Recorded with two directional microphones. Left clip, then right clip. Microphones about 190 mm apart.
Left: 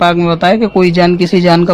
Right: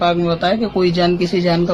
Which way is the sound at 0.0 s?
50° left (ahead or behind).